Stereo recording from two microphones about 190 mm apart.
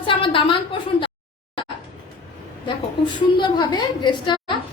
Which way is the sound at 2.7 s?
25° left (ahead or behind).